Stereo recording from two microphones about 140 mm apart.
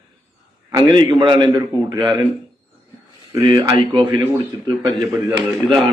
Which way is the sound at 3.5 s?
35° right (ahead or behind).